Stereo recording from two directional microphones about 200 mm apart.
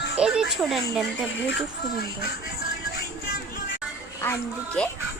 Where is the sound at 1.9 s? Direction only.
50° left (ahead or behind).